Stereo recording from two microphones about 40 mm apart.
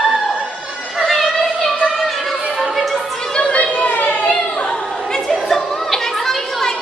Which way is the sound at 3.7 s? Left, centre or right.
Left.